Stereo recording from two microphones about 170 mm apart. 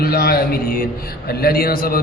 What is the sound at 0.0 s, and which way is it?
A man's voice, 65° left (ahead or behind).